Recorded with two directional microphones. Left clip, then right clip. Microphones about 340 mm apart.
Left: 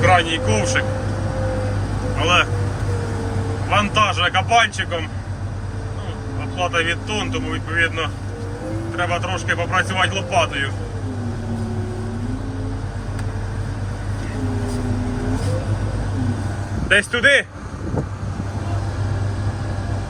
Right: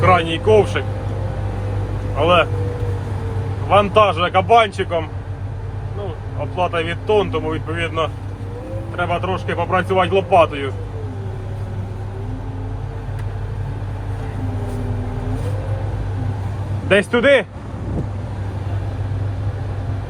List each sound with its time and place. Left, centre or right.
0.0 s speech: centre
2.1 s speech: centre
3.7 s speech: centre
6.6 s speech: centre
16.9 s speech: centre